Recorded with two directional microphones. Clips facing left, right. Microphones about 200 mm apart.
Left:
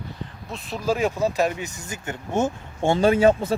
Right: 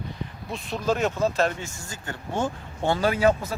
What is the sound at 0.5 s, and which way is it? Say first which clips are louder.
Speech: left 1 dB; 5° left (ahead or behind).